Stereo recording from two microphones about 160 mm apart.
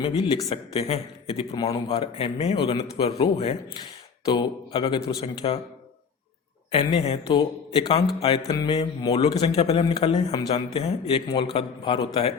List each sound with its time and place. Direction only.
0.0 s a man's voice: 35° left (ahead or behind)
2.7 s a man's voice: 20° left (ahead or behind)
3.0 s a man's voice: 40° left (ahead or behind)
4.3 s a man's voice: 30° left (ahead or behind)
6.7 s a man's voice: 40° left (ahead or behind)
9.4 s a man's voice: 40° left (ahead or behind)